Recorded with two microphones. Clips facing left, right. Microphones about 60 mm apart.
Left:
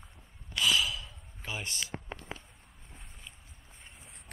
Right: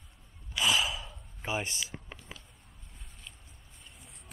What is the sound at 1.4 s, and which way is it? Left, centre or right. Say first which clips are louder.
Speech: right 5 dB; right.